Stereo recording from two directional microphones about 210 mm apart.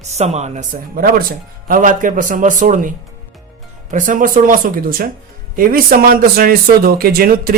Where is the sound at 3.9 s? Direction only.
40° right (ahead or behind).